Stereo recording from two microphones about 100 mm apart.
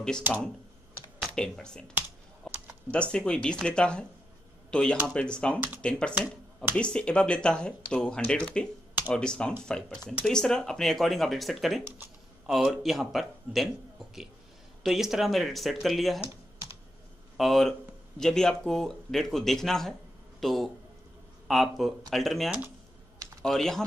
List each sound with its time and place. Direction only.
1.3 s speech: 5° left (ahead or behind)
2.4 s typing: 5° left (ahead or behind)
2.9 s speech: 10° left (ahead or behind)
17.4 s speech: centre (ahead or behind)